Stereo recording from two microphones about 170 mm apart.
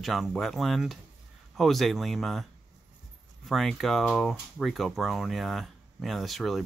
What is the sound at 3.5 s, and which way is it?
Speech, centre (ahead or behind).